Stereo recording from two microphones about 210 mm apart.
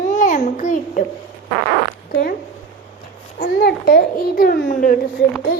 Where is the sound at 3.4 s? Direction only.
45° left (ahead or behind).